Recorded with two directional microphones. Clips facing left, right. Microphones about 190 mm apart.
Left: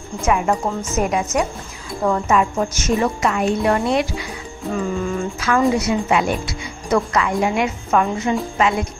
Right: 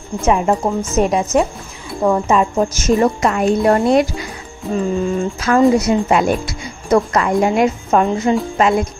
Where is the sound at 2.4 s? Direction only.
35° right (ahead or behind).